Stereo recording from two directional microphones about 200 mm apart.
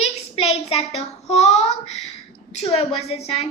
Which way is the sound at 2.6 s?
30° left (ahead or behind).